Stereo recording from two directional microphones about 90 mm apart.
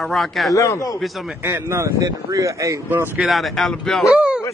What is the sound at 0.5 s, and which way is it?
Speech, 35° left (ahead or behind).